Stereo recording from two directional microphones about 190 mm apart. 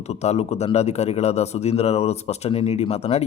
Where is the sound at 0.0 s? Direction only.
35° left (ahead or behind).